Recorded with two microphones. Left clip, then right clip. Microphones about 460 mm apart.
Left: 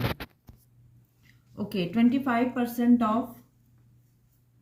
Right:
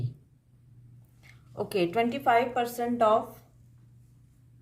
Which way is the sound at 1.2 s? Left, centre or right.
Centre.